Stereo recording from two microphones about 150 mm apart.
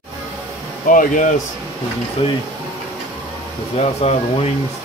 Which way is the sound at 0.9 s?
60° left (ahead or behind).